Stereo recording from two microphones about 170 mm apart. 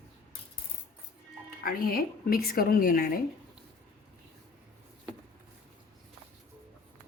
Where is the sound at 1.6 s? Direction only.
60° left (ahead or behind).